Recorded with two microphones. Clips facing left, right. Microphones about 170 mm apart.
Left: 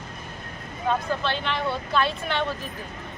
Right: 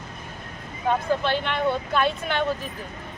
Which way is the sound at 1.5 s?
55° right (ahead or behind).